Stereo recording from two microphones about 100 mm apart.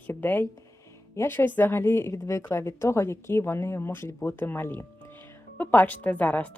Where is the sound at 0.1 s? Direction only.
20° left (ahead or behind).